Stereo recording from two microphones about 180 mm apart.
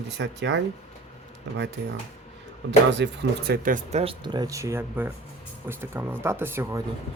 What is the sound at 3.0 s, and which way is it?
Speech, 80° right.